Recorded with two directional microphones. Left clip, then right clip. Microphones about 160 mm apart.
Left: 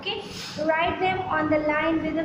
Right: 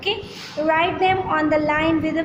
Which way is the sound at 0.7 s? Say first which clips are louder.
Right 5 dB; 55° right (ahead or behind).